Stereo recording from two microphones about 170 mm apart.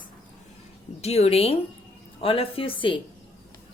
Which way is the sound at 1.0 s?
40° left (ahead or behind).